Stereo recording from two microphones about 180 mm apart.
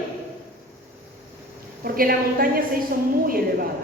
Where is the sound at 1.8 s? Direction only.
55° right (ahead or behind).